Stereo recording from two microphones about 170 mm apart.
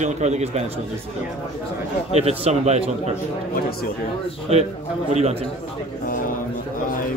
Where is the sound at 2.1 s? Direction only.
40° right (ahead or behind).